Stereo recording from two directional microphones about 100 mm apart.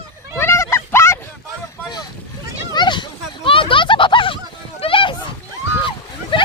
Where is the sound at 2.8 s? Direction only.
50° left (ahead or behind).